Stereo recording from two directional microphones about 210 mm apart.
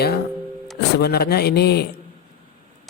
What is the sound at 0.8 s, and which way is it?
Speech, 50° left (ahead or behind).